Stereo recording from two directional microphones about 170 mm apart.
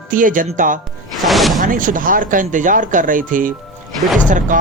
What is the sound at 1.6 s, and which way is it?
Speech, 50° right (ahead or behind).